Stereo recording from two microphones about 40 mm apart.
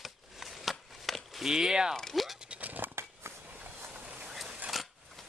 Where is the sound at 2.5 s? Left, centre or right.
Right.